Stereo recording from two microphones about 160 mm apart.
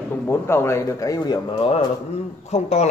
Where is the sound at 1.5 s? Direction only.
40° left (ahead or behind).